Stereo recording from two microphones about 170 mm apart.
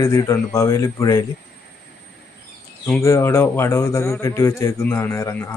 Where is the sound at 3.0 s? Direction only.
15° left (ahead or behind).